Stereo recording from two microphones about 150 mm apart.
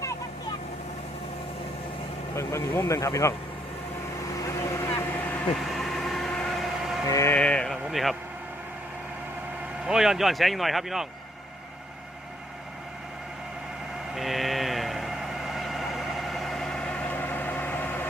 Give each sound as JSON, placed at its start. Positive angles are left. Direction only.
{"t": 2.3, "sound": "speech", "side_deg": 20}
{"t": 4.9, "sound": "vehicle", "side_deg": 10}
{"t": 5.6, "sound": "vehicle", "side_deg": 0}
{"t": 7.1, "sound": "speech", "side_deg": 20}
{"t": 7.3, "sound": "a sound", "side_deg": 5}
{"t": 9.8, "sound": "speech", "side_deg": -5}
{"t": 14.2, "sound": "sheep", "side_deg": 0}